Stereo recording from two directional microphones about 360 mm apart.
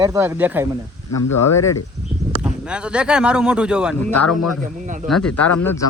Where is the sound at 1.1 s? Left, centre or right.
Left.